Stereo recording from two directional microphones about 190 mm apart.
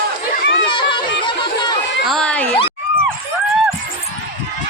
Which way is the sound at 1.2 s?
25° left (ahead or behind).